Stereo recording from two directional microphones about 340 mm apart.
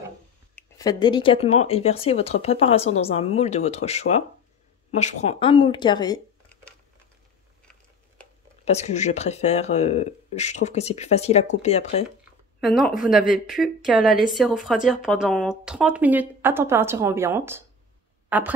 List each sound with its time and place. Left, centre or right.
0.6 s speech: centre
8.6 s speech: centre
12.5 s a woman's voice: centre
18.3 s a sound: centre